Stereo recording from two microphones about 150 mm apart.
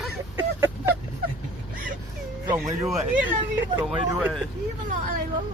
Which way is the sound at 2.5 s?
20° right (ahead or behind).